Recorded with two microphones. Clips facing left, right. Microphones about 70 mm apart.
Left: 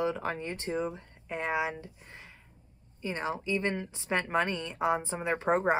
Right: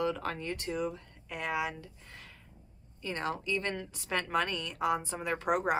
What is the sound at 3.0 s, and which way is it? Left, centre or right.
A woman's voice, centre.